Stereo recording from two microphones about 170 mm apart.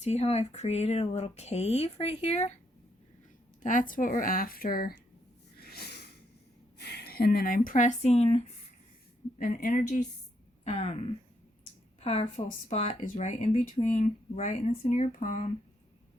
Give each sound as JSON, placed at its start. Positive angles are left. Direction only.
{"t": 0.0, "sound": "speech", "side_deg": 40}
{"t": 3.6, "sound": "speech", "side_deg": 50}
{"t": 5.5, "sound": "a sound", "side_deg": 65}
{"t": 6.7, "sound": "speech", "side_deg": 70}
{"t": 9.4, "sound": "a woman's voice", "side_deg": 50}
{"t": 12.5, "sound": "speech", "side_deg": 45}